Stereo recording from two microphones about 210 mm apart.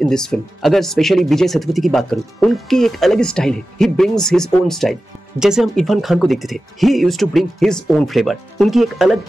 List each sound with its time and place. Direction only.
0.0 s speech: 5° left (ahead or behind)